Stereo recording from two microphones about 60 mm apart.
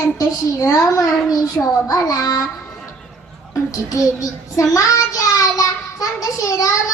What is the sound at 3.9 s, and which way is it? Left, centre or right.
Child singing, left.